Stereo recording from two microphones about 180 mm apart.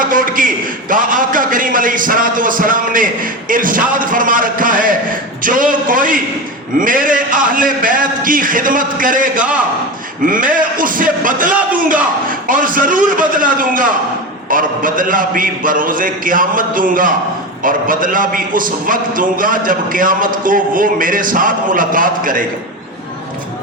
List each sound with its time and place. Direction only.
0.0 s a man's voice: 50° right (ahead or behind)